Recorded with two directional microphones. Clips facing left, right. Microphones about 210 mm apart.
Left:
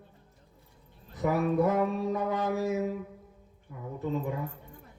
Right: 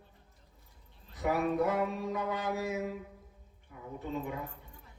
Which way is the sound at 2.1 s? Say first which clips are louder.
Left 5 dB; 45° left (ahead or behind).